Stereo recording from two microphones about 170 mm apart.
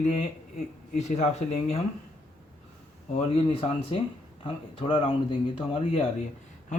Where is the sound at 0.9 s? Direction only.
40° left (ahead or behind).